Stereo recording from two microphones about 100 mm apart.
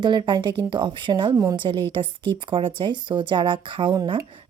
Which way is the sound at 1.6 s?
55° right (ahead or behind).